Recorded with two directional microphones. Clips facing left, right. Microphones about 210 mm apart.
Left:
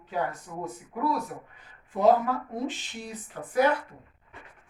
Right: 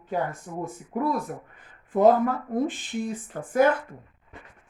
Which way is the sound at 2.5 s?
55° right (ahead or behind).